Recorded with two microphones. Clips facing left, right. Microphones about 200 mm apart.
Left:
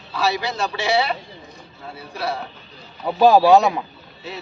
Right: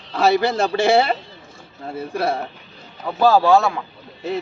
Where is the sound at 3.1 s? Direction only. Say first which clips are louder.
Left 2 dB; 15° left (ahead or behind).